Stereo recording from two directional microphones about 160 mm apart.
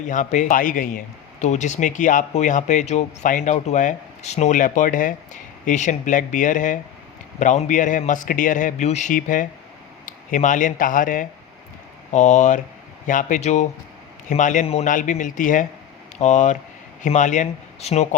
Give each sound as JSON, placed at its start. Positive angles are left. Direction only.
{"t": 0.0, "sound": "speech", "side_deg": 50}